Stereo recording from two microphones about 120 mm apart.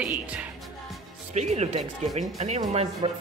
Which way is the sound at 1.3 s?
70° right (ahead or behind).